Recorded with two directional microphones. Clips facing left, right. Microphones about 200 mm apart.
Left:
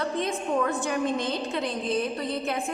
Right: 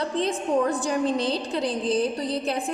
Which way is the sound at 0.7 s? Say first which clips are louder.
Right 2 dB; 35° right (ahead or behind).